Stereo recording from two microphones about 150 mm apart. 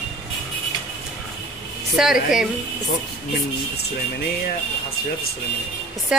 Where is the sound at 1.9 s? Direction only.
5° right (ahead or behind).